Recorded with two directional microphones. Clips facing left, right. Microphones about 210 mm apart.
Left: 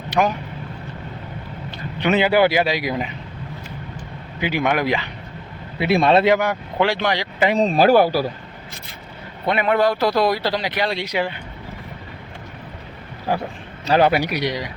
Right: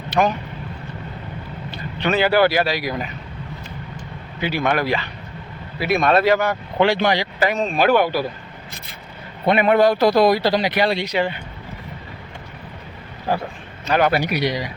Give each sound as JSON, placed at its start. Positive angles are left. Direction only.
{"t": 0.1, "sound": "speech", "side_deg": 5}
{"t": 2.0, "sound": "speech", "side_deg": 15}
{"t": 4.4, "sound": "speech", "side_deg": 15}
{"t": 5.8, "sound": "speech", "side_deg": 25}
{"t": 6.7, "sound": "speech", "side_deg": 0}
{"t": 7.5, "sound": "speech", "side_deg": 35}
{"t": 9.5, "sound": "a man's voice", "side_deg": -15}
{"t": 10.9, "sound": "speech", "side_deg": 10}
{"t": 13.8, "sound": "speech", "side_deg": 30}
{"t": 14.3, "sound": "speech", "side_deg": -5}